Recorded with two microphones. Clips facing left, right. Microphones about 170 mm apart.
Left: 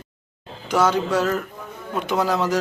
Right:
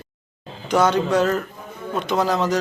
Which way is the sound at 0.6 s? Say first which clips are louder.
Right 2 dB; 5° left (ahead or behind).